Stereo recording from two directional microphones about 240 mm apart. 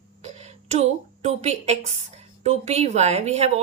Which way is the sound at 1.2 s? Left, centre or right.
Right.